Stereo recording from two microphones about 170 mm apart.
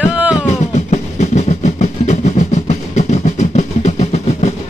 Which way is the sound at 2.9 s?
45° left (ahead or behind).